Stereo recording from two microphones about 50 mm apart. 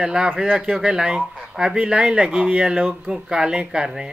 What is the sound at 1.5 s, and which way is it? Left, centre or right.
Speech, centre.